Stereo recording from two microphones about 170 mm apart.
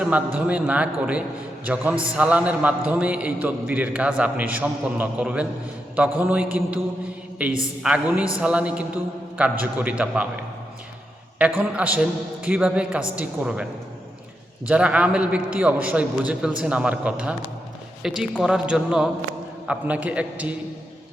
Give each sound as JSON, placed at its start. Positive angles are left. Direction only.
{"t": 0.3, "sound": "a man's voice", "side_deg": -10}
{"t": 14.7, "sound": "a man's voice", "side_deg": -5}